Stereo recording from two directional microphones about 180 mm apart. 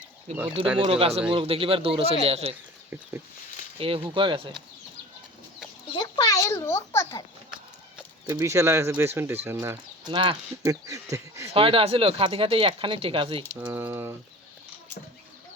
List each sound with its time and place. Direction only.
0.3 s speech: 35° right (ahead or behind)
3.8 s speech: 30° right (ahead or behind)
5.9 s a child's voice: 25° left (ahead or behind)
8.3 s speech: 15° right (ahead or behind)
11.5 s speech: 30° right (ahead or behind)
13.6 s speech: 10° right (ahead or behind)